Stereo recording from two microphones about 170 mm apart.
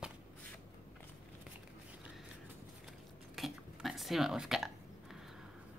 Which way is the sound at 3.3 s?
Centre (ahead or behind).